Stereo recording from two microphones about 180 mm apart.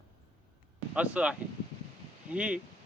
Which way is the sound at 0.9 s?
5° right (ahead or behind).